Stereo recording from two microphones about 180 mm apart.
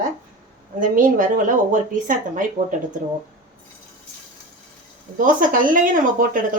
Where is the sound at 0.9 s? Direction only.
50° right (ahead or behind).